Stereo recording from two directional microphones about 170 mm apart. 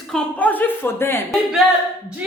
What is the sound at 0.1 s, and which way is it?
Speech, 5° left (ahead or behind).